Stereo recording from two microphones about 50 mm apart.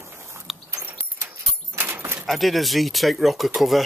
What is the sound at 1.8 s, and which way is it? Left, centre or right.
Keys jangling, right.